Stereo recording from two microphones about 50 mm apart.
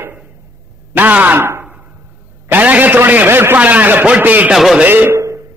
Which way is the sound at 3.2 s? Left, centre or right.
Right.